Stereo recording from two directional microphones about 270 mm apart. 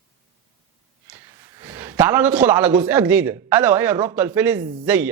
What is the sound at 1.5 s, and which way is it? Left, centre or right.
A man's voice, centre.